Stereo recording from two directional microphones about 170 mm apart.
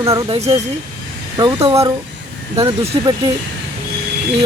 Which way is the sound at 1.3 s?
30° right (ahead or behind).